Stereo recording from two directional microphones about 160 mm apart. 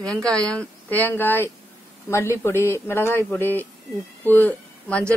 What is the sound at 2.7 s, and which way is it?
Speech, 15° left (ahead or behind).